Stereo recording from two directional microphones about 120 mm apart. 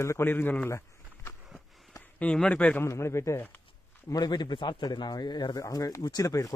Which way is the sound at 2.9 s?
25° left (ahead or behind).